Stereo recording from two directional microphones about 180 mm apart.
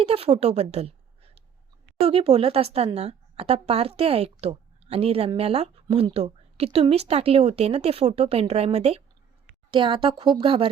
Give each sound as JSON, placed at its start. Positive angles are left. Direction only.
{"t": 0.0, "sound": "a woman's voice", "side_deg": -35}